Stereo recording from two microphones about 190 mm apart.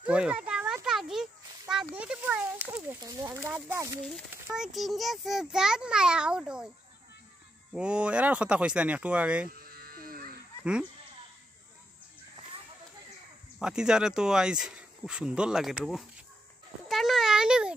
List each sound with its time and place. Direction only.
0.0 s a sound: 5° right (ahead or behind)
2.0 s speech: 5° right (ahead or behind)
4.3 s speech: 5° right (ahead or behind)
7.7 s speech: 5° right (ahead or behind)
9.6 s electric shaver: 50° right (ahead or behind)
10.6 s speech: 5° right (ahead or behind)
13.6 s speech: 5° right (ahead or behind)
16.8 s a sound: centre (ahead or behind)